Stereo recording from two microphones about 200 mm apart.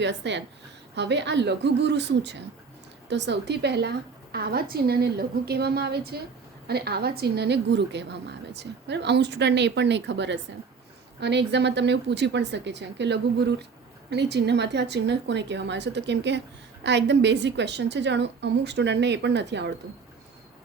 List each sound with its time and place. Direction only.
0.0 s a woman's voice: 60° right (ahead or behind)